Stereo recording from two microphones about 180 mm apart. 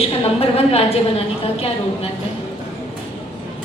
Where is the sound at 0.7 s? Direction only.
35° left (ahead or behind).